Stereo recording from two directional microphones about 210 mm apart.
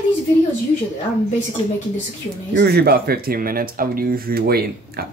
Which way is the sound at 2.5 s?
50° right (ahead or behind).